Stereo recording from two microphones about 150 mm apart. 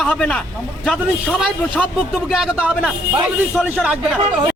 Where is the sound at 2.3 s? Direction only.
Centre (ahead or behind).